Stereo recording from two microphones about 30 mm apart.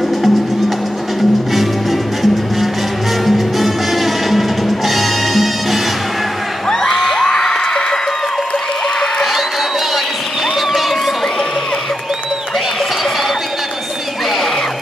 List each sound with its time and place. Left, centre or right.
1.5 s music: centre
6.9 s a sound: centre
7.2 s music: left